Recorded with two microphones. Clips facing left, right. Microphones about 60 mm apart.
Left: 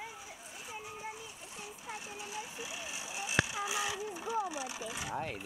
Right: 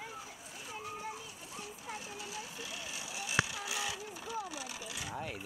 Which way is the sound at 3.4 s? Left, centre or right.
Centre.